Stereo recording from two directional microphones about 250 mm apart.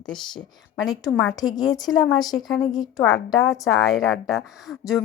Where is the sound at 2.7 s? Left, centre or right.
Centre.